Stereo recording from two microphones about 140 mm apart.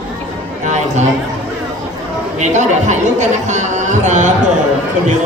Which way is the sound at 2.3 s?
55° right (ahead or behind).